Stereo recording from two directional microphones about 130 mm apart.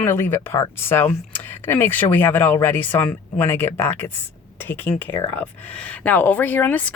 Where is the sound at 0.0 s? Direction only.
15° left (ahead or behind).